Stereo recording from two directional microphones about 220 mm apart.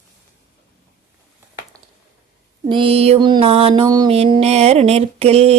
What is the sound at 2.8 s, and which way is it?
Mantra, 25° right (ahead or behind).